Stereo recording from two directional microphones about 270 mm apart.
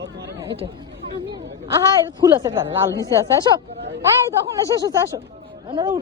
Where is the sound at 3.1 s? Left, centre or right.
Centre.